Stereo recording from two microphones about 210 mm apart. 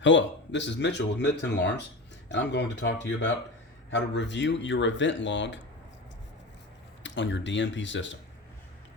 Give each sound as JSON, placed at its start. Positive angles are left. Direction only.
{"t": 0.0, "sound": "speech", "side_deg": 60}
{"t": 7.0, "sound": "speech", "side_deg": 60}